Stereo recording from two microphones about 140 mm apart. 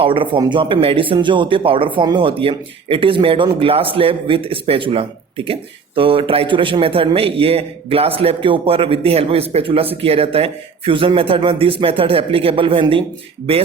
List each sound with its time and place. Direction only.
0.0 s speech: 40° right (ahead or behind)